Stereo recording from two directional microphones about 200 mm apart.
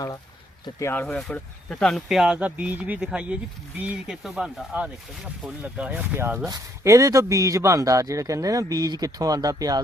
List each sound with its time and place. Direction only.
0.6 s speech: 15° left (ahead or behind); by 9.8 s 20° right (ahead or behind)